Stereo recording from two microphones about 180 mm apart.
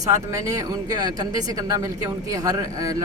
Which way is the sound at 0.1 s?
15° right (ahead or behind).